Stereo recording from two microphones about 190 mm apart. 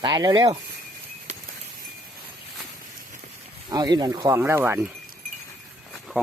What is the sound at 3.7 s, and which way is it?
Speech, 20° right (ahead or behind).